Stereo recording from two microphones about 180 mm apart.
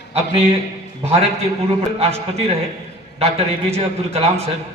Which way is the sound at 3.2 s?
35° right (ahead or behind).